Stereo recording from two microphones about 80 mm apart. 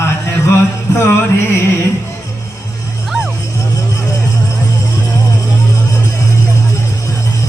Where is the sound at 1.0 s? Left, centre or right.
Left.